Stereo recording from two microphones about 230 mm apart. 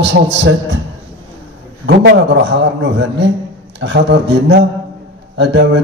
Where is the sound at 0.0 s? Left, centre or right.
Right.